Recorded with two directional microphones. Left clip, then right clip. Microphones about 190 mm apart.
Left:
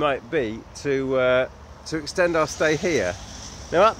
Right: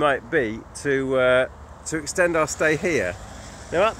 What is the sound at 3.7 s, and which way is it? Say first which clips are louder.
Speech: left 3 dB; 20° left (ahead or behind).